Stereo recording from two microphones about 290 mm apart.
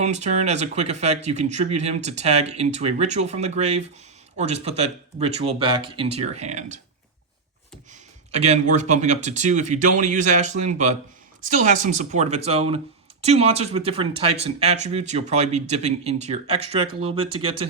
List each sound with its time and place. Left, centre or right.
0.0 s speech: right
8.3 s speech: right